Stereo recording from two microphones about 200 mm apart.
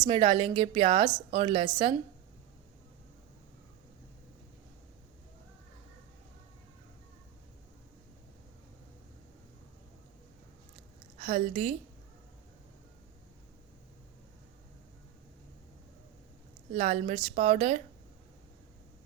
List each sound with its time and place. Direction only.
0.0 s a woman's voice: 25° right (ahead or behind)
11.3 s a woman's voice: 30° right (ahead or behind)
16.7 s a woman's voice: 35° right (ahead or behind)